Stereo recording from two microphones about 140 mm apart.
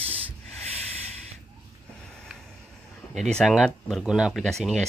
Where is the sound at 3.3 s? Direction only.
Centre (ahead or behind).